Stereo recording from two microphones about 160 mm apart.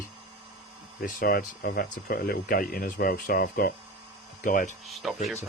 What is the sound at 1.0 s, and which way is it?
Speech, 70° left (ahead or behind).